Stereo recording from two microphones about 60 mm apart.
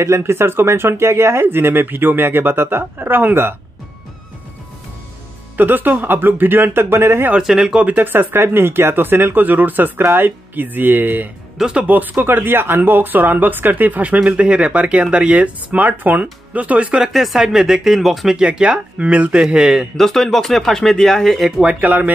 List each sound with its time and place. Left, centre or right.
0.0 s speech: right
5.6 s speech: right
7.3 s speech: centre
7.8 s speech: right
11.5 s speech: centre
11.9 s speech: right
17.1 s speech: centre
18.4 s speech: centre
19.5 s speech: centre
20.0 s speech: centre
21.6 s speech: right